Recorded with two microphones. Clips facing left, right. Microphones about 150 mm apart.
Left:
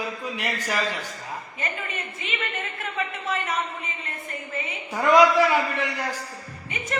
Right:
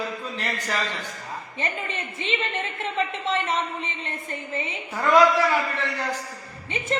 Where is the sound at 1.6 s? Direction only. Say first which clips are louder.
Right 4 dB; 30° right (ahead or behind).